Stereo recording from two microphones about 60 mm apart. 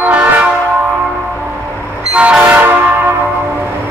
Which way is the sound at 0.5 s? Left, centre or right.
Right.